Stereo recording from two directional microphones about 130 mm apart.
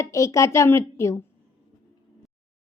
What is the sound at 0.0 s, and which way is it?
A woman's voice, 25° left (ahead or behind).